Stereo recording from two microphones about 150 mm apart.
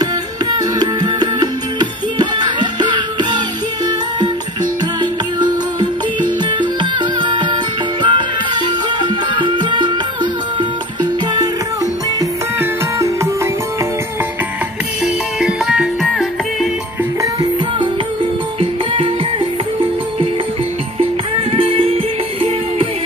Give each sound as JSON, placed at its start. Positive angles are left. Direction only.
{"t": 0.6, "sound": "music", "side_deg": -25}
{"t": 5.4, "sound": "music", "side_deg": -30}
{"t": 11.0, "sound": "music", "side_deg": -25}
{"t": 15.4, "sound": "music", "side_deg": -5}
{"t": 17.2, "sound": "music", "side_deg": -25}
{"t": 21.0, "sound": "music", "side_deg": -40}